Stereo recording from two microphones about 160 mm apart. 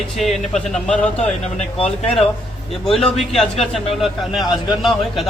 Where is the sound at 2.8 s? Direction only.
Centre (ahead or behind).